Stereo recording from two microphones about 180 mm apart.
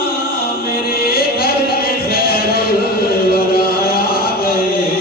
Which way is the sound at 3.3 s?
60° left (ahead or behind).